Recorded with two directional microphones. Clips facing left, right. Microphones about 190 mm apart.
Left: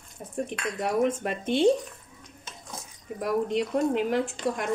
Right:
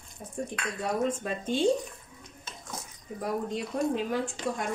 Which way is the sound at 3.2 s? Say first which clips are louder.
Left 5 dB; 70° left (ahead or behind).